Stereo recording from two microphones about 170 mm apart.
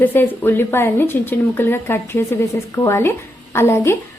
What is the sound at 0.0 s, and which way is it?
Speech, 10° left (ahead or behind).